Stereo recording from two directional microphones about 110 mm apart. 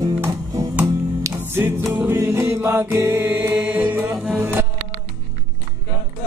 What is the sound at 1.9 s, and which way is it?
Mantra, 25° right (ahead or behind).